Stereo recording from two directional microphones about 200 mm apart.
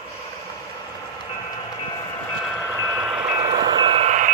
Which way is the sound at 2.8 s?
10° right (ahead or behind).